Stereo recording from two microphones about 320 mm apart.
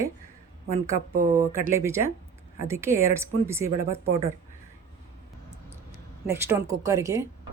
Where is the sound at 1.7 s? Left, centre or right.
Centre.